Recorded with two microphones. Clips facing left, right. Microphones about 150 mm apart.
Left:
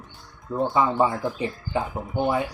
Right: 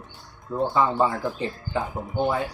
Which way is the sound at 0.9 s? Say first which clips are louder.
Left 1 dB; 20° left (ahead or behind).